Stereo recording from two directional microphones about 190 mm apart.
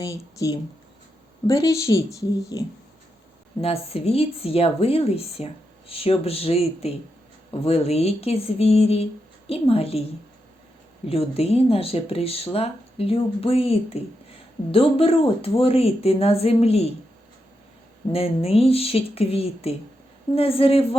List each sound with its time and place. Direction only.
0.0 s a woman's voice: 15° left (ahead or behind)
3.6 s speech: 30° left (ahead or behind)
11.1 s speech: 30° left (ahead or behind)
18.1 s speech: 30° left (ahead or behind)